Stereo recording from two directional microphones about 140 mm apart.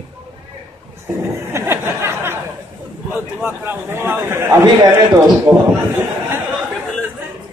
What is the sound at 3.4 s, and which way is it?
A man's voice, 15° right (ahead or behind).